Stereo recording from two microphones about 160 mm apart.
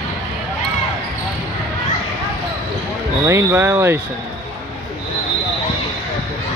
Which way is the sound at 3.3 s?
15° right (ahead or behind).